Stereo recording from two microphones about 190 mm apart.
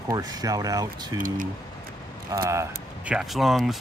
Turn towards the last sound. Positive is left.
turn(degrees=0)  # may be behind; listen again after turning